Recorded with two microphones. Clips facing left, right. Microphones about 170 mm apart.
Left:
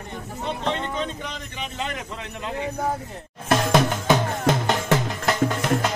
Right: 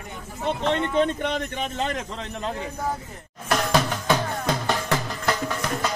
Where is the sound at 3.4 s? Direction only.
20° left (ahead or behind).